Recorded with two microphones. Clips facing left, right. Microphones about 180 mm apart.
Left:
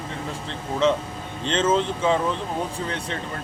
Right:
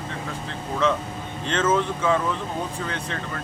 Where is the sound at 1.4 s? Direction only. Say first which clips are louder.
Left 1 dB; 30° left (ahead or behind).